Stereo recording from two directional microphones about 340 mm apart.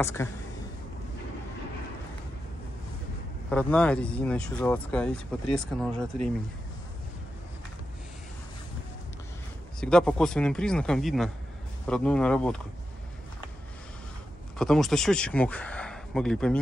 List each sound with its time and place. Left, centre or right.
0.0 s speech: centre
3.4 s speech: centre
9.8 s speech: centre
14.6 s speech: centre